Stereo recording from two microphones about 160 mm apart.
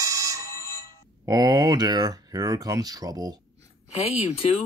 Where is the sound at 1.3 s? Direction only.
25° right (ahead or behind).